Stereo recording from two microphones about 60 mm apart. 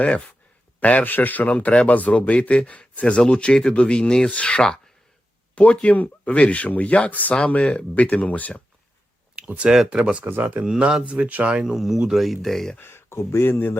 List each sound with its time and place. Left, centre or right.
0.8 s speech: left
9.3 s a sound: right
9.7 s speech: centre
10.2 s speech: right
10.7 s speech: centre
12.8 s speech: left